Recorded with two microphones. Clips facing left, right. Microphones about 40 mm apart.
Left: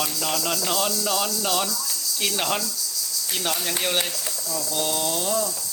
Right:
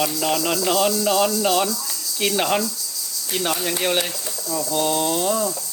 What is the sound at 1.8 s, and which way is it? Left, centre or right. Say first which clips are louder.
Cricket: right 4 dB; centre.